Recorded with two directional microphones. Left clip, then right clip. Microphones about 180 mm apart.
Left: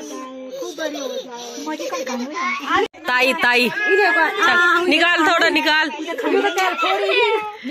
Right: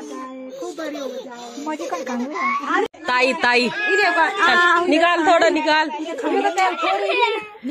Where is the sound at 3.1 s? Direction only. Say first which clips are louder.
Left 1 dB; 5° right (ahead or behind).